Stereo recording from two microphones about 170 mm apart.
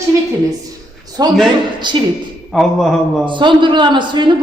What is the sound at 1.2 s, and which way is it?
Speech, 20° right (ahead or behind).